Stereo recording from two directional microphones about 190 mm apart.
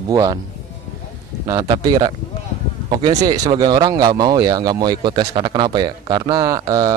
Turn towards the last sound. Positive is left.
turn(degrees=-20)  # may be behind; listen again after turning